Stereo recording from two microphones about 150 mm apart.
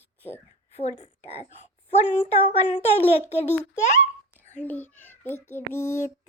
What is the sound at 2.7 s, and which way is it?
Child singing, 45° left (ahead or behind).